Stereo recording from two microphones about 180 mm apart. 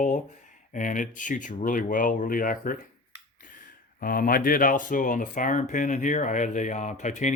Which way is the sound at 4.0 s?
50° left (ahead or behind).